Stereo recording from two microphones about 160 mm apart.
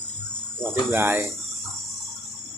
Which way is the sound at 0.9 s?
15° right (ahead or behind).